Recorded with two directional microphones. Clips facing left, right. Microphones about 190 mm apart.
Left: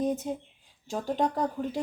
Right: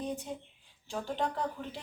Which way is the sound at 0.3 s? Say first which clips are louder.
Left 7 dB; 45° left (ahead or behind).